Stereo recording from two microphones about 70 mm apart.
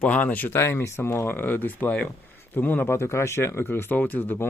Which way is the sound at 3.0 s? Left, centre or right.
Left.